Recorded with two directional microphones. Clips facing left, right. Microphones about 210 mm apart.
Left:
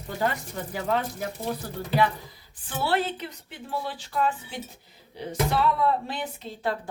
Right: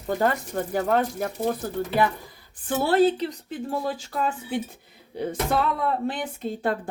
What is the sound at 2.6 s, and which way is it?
Speech, 45° right (ahead or behind).